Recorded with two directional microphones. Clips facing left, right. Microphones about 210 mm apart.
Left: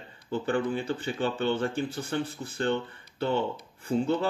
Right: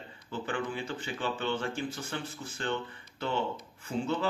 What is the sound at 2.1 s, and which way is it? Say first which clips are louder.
Speech: left 7 dB; 60° left (ahead or behind).